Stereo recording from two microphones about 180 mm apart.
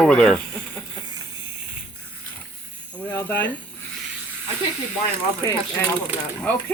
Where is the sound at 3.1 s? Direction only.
10° left (ahead or behind).